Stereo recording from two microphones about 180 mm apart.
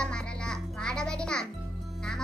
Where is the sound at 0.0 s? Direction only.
5° left (ahead or behind).